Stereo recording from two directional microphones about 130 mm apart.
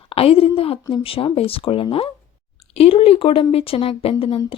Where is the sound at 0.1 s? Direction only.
45° left (ahead or behind).